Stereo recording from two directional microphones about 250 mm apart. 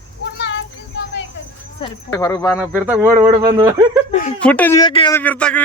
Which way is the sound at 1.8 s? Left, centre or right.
Centre.